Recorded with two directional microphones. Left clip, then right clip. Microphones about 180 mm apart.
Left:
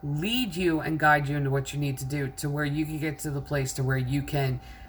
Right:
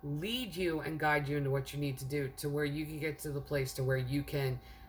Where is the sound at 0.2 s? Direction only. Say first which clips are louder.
Left 9 dB; 20° right (ahead or behind).